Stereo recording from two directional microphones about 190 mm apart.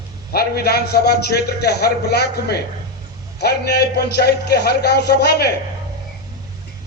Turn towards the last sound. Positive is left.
turn(degrees=60)  # may be behind; listen again after turning